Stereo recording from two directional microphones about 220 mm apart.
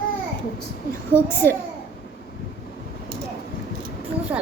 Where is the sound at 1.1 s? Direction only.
10° left (ahead or behind).